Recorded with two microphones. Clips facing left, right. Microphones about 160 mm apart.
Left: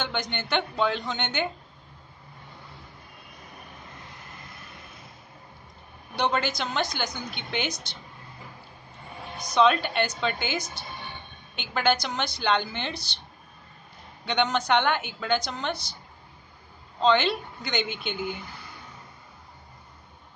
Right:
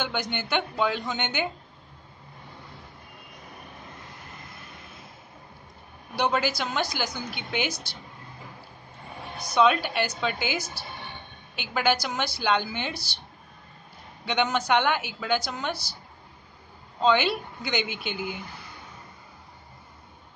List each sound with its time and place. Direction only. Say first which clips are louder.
0.0 s a man's voice: right 1 dB; 5° right (ahead or behind)
6.1 s a man's voice: right 1 dB; 5° right (ahead or behind)
9.6 s a woman's voice: even; 5° right (ahead or behind)
14.2 s a man's voice: even; 5° right (ahead or behind)
17.0 s a woman's voice: even; 5° right (ahead or behind)